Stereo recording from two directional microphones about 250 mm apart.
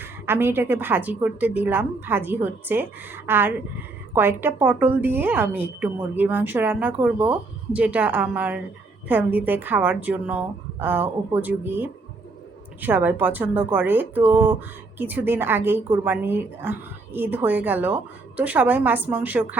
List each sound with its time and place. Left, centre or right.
0.0 s a woman's voice: centre